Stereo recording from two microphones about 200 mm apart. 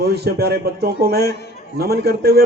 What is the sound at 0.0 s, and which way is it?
A man's voice, 55° right (ahead or behind).